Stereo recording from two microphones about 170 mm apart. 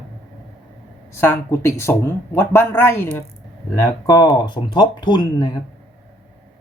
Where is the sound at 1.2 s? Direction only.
15° left (ahead or behind).